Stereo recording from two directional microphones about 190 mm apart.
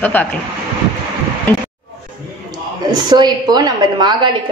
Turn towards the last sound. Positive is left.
turn(degrees=-20)  # may be behind; listen again after turning